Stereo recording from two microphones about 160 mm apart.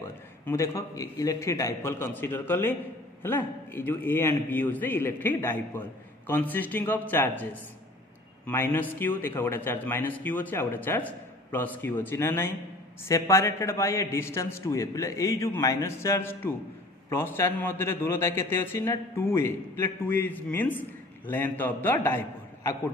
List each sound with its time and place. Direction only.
0.5 s a man's voice: 20° left (ahead or behind)
8.5 s a man's voice: 15° left (ahead or behind)